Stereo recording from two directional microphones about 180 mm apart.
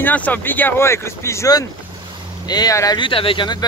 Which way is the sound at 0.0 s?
10° left (ahead or behind).